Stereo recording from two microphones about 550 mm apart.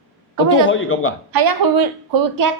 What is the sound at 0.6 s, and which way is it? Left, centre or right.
Speech, left.